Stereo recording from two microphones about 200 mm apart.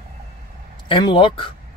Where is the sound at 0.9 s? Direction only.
25° left (ahead or behind).